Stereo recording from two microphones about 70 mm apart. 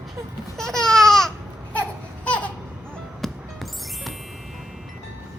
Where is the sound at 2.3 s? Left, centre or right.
Centre.